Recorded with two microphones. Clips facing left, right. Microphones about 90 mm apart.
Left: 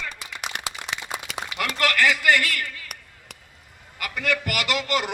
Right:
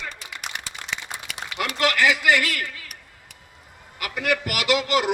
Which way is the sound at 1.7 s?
15° right (ahead or behind).